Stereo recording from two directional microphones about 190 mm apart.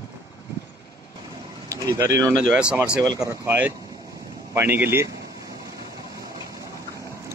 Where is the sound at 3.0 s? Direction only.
20° right (ahead or behind).